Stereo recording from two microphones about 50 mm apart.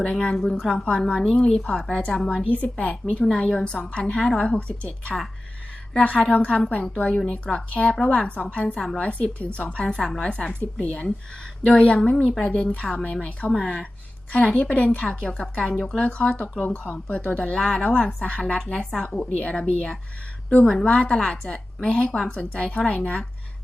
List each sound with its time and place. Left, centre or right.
0.0 s a woman's voice: centre
6.3 s speech: left
6.9 s a woman's voice: centre
15.5 s a woman's voice: centre
16.0 s speech: centre
18.7 s a woman's voice: centre